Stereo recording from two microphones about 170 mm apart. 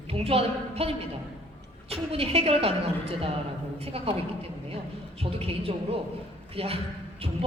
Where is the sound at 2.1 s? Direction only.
35° right (ahead or behind).